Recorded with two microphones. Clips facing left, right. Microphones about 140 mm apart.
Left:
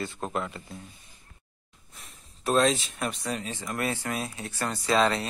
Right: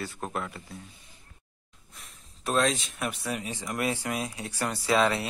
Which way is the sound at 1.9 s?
Centre (ahead or behind).